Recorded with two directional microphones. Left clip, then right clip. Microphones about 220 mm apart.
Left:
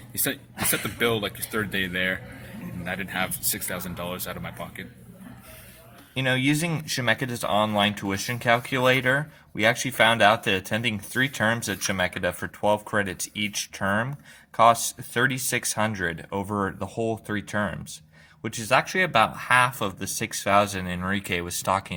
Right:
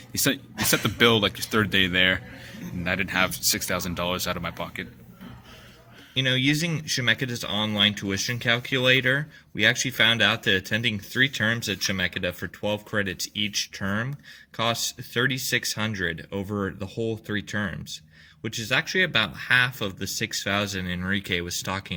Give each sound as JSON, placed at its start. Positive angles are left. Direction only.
{"t": 0.1, "sound": "speech", "side_deg": -40}
{"t": 6.1, "sound": "speech", "side_deg": -55}
{"t": 16.9, "sound": "speech", "side_deg": -20}
{"t": 17.3, "sound": "speech", "side_deg": -55}